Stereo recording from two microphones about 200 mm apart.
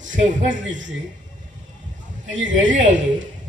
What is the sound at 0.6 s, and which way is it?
Speech, 70° right (ahead or behind).